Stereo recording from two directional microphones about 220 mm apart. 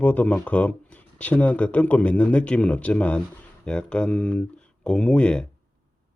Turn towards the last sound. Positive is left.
turn(degrees=5)  # may be behind; listen again after turning